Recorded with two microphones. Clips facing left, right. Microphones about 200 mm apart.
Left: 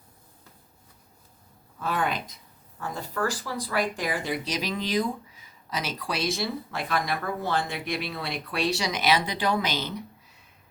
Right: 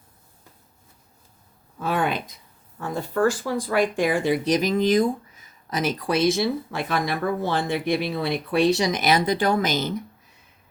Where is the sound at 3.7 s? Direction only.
25° right (ahead or behind).